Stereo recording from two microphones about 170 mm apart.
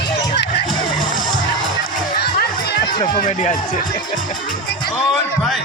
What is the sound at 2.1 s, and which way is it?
Music, 70° left (ahead or behind).